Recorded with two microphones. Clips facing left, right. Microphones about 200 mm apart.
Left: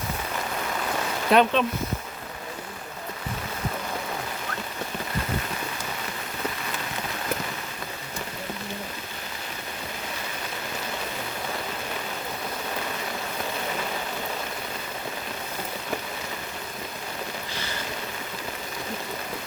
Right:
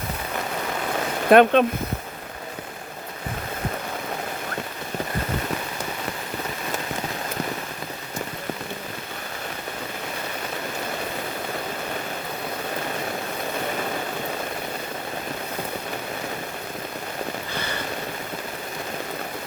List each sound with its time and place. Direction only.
1.3 s speech: 55° right (ahead or behind)